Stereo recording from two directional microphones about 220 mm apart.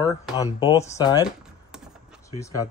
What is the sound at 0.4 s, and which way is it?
Speech, 15° left (ahead or behind).